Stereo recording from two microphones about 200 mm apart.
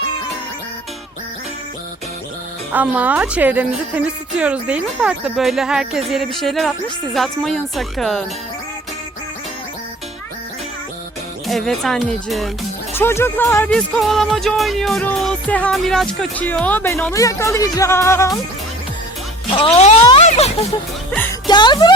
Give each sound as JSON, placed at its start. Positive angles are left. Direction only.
{"t": 2.7, "sound": "a woman's voice", "side_deg": -10}
{"t": 11.4, "sound": "a woman's voice", "side_deg": 0}
{"t": 13.0, "sound": "speech", "side_deg": 10}
{"t": 19.5, "sound": "speech", "side_deg": 30}